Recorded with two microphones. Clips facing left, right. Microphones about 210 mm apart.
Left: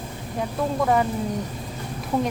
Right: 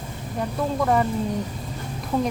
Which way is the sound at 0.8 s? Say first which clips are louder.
Even; 5° left (ahead or behind).